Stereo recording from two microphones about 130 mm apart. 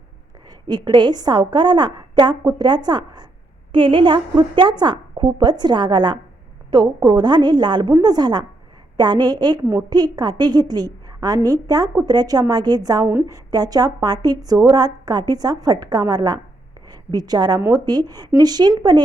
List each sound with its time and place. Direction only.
0.7 s a woman's voice: 35° right (ahead or behind)